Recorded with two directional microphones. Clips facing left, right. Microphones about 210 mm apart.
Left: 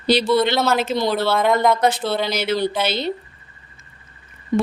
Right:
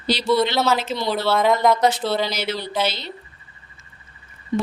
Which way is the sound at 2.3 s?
55° left (ahead or behind).